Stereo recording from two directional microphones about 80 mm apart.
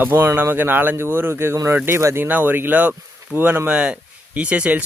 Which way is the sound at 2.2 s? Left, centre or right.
Right.